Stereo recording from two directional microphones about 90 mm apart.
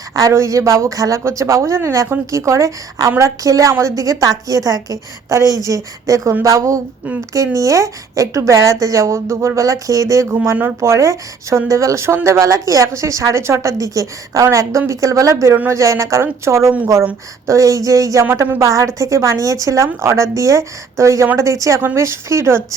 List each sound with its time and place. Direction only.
0.1 s speech: 40° right (ahead or behind)